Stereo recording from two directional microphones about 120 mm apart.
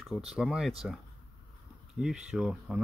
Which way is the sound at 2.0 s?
5° right (ahead or behind).